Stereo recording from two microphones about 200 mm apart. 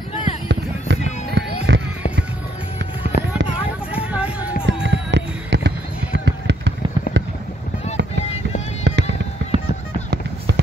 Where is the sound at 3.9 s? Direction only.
5° right (ahead or behind).